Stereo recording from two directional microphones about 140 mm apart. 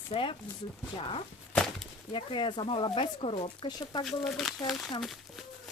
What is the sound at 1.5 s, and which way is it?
Chop, 5° left (ahead or behind).